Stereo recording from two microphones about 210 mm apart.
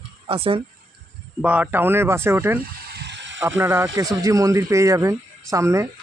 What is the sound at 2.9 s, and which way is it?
Bicycle, 55° right (ahead or behind).